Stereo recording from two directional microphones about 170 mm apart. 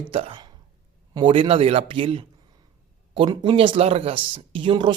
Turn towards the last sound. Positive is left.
turn(degrees=-25)  # may be behind; listen again after turning